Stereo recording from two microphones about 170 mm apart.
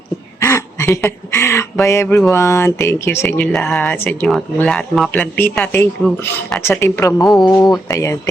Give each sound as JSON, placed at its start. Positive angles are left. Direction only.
{"t": 0.4, "sound": "a sound", "side_deg": 15}
{"t": 1.3, "sound": "speech", "side_deg": 15}
{"t": 7.3, "sound": "speech", "side_deg": 0}
{"t": 7.5, "sound": "speech", "side_deg": 20}